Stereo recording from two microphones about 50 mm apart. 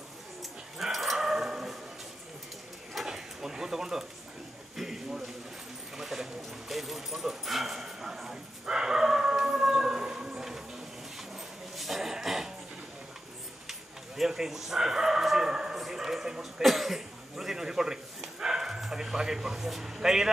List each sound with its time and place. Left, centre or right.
0.4 s dog: centre
2.9 s drawer open or close: centre
4.7 s a sound: centre
11.1 s dog: centre
13.7 s dog: centre
15.8 s a man's voice: centre